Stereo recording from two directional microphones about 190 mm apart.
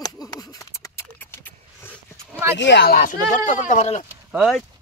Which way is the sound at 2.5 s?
65° left (ahead or behind).